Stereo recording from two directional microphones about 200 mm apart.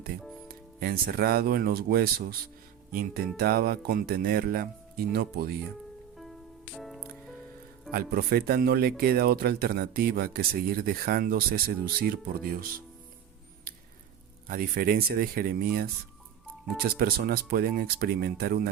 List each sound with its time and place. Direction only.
0.4 s speech: 50° right (ahead or behind)
6.7 s music: centre (ahead or behind)
7.9 s speech: 50° right (ahead or behind)
13.7 s a sound: 45° right (ahead or behind)
14.4 s speech: 45° right (ahead or behind)
16.9 s speech: 50° right (ahead or behind)